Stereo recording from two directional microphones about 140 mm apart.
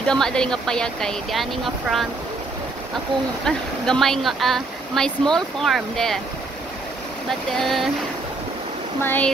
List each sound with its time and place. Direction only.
0.1 s speech: 5° left (ahead or behind)
3.4 s speech: 5° left (ahead or behind)
7.2 s speech: centre (ahead or behind)
9.0 s speech: 15° left (ahead or behind)